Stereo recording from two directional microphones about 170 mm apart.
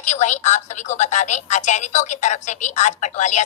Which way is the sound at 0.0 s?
45° left (ahead or behind).